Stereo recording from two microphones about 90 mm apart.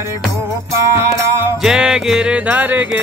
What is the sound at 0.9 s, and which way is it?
Music, 30° right (ahead or behind).